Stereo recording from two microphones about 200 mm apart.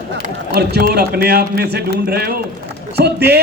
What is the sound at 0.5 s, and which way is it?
A man's voice, 55° right (ahead or behind).